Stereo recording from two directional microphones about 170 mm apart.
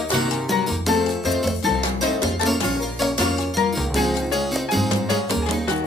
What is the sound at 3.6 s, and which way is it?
Music, centre (ahead or behind).